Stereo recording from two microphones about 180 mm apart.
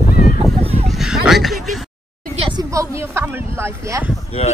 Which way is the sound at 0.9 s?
Centre (ahead or behind).